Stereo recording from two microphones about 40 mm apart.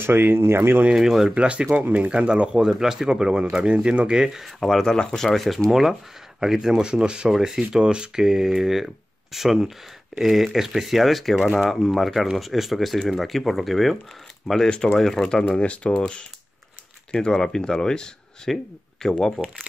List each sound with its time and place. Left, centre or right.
0.0 s speech: right
0.9 s speech: centre
1.3 s speech: right
2.0 s speech: right
2.7 s speech: centre; by 4.1 s right
4.1 s speech: centre
4.4 s speech: centre
4.9 s speech: centre
5.7 s speech: centre
6.8 s speech: right
7.2 s speech: centre
7.7 s speech: right
8.2 s speech: centre
15.6 s speech: left